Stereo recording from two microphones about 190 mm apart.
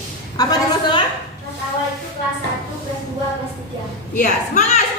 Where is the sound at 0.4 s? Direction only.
20° left (ahead or behind).